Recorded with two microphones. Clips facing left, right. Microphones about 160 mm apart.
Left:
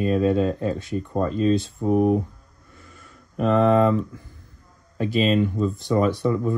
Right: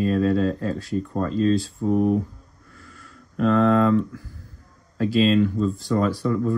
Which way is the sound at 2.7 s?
Centre (ahead or behind).